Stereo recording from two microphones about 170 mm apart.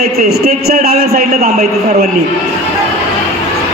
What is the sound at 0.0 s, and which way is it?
A man's voice, 65° right (ahead or behind).